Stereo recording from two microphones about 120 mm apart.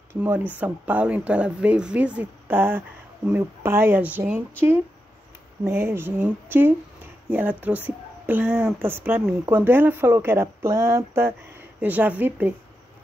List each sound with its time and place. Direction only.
0.1 s speech: 15° right (ahead or behind)